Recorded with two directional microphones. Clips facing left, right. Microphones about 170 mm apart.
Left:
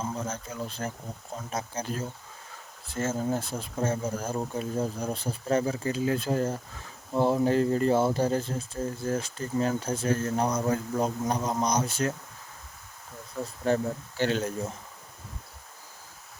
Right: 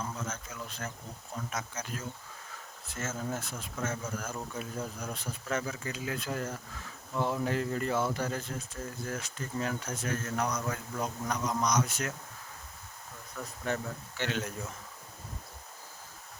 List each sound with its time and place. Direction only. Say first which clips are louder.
0.0 s speech: left 5 dB; 30° left (ahead or behind)
13.3 s speech: left 8 dB; 30° left (ahead or behind)